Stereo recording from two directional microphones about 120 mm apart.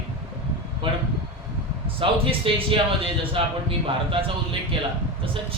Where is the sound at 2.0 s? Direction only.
50° right (ahead or behind).